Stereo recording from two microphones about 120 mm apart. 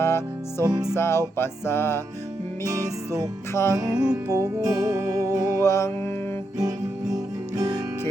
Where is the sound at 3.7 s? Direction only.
35° right (ahead or behind).